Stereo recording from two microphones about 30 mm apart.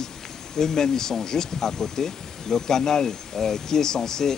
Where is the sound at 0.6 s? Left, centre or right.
Centre.